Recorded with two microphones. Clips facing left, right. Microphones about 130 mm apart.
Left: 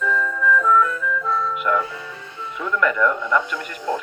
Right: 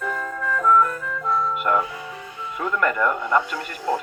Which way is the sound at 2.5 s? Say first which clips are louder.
Left 1 dB; 45° right (ahead or behind).